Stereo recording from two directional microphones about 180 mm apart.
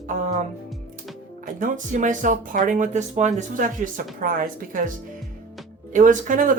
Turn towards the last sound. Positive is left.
turn(degrees=-45)  # may be behind; listen again after turning